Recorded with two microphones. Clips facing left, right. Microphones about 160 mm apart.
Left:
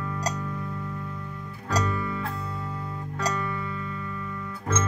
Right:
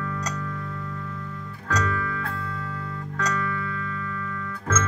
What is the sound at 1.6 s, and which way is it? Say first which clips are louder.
Music: right 1 dB; 30° left (ahead or behind).